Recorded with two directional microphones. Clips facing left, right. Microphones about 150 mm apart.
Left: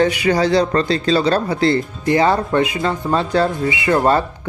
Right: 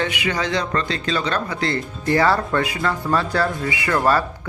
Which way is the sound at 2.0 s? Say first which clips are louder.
Left 2 dB; 20° left (ahead or behind).